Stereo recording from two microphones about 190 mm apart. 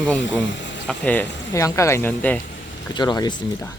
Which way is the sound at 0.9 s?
10° left (ahead or behind).